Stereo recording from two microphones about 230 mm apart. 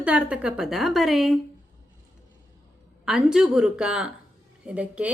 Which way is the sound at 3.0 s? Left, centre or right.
Centre.